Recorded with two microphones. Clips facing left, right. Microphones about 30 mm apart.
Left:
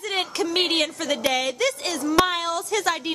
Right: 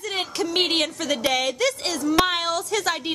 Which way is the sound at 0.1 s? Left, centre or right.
Centre.